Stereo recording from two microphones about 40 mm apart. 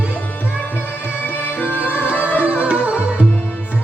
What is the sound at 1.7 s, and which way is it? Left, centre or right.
Music, left.